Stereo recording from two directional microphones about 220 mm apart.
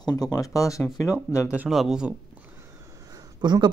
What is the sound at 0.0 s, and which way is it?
Speech, 15° left (ahead or behind).